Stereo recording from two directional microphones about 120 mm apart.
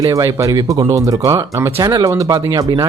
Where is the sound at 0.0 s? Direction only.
30° right (ahead or behind).